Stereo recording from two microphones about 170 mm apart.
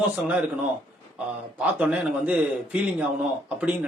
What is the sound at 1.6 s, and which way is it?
Speech, 10° right (ahead or behind).